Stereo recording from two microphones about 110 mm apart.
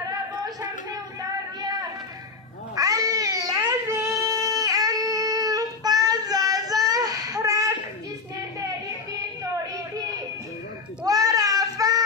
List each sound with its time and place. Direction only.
1.6 s a sound: 35° right (ahead or behind)
2.7 s cat: 35° right (ahead or behind)
4.2 s child singing: 35° right (ahead or behind)
8.5 s hands: 30° right (ahead or behind)
11.1 s goat: 35° right (ahead or behind)